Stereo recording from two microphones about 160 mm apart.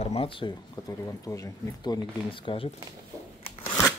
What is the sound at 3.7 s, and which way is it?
Scissors, 15° left (ahead or behind).